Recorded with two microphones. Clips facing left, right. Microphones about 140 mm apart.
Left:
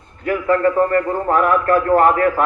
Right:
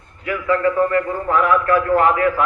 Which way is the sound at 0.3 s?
45° left (ahead or behind).